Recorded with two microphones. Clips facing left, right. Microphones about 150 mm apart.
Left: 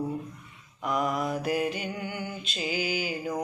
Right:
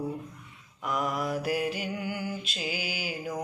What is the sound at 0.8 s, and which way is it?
Speech, centre (ahead or behind).